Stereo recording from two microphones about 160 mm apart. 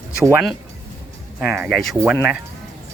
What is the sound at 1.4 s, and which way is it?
Speech, 10° right (ahead or behind).